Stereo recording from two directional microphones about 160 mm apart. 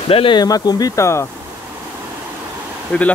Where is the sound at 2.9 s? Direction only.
10° left (ahead or behind).